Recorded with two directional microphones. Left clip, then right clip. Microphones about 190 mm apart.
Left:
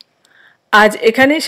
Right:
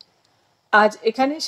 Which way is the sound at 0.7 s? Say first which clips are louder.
Left 7 dB; 45° left (ahead or behind).